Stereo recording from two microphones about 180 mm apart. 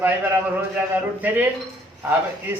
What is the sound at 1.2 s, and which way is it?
Speech, 10° right (ahead or behind).